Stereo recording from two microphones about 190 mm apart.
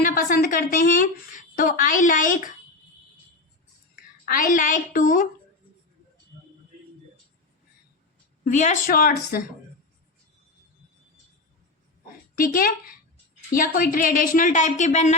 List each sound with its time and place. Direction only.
0.0 s a woman's voice: 45° left (ahead or behind)
4.3 s speech: 45° left (ahead or behind)
8.4 s speech: 40° left (ahead or behind)
12.4 s speech: 50° left (ahead or behind)